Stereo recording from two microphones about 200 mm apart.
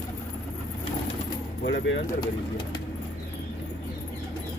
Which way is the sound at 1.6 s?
65° left (ahead or behind).